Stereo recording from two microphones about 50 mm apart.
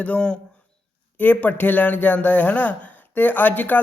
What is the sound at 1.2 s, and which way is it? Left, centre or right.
Speech, left.